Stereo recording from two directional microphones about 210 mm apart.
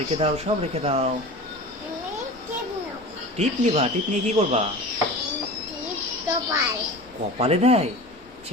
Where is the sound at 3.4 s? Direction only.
30° right (ahead or behind).